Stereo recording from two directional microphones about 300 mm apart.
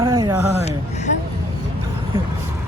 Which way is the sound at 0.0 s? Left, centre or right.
Centre.